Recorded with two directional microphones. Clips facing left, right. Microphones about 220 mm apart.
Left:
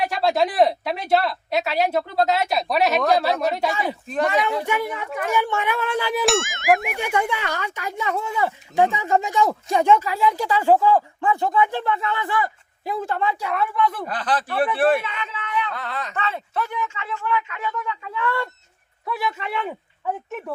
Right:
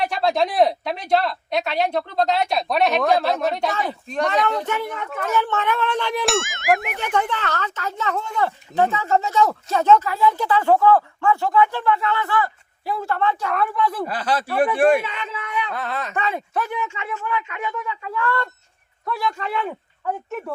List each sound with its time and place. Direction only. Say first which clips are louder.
0.0 s speech: even; centre (ahead or behind)
15.7 s speech: right 3 dB; 20° right (ahead or behind)
19.0 s a man's voice: right 1 dB; 5° left (ahead or behind)